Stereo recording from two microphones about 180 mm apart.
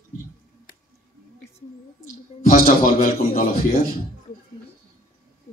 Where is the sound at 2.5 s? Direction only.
40° left (ahead or behind).